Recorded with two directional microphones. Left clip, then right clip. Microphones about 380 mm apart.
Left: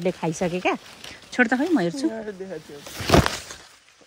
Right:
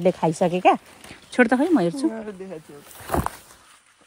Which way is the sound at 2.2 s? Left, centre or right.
Right.